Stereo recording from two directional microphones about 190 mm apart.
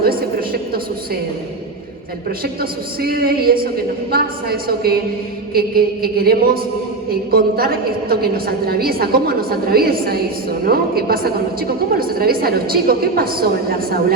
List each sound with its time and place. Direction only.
0.0 s a woman's voice: 55° right (ahead or behind)
2.4 s a woman's voice: 55° right (ahead or behind)